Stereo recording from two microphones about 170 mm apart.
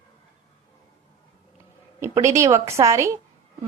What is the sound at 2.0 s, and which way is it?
A woman's voice, 15° right (ahead or behind).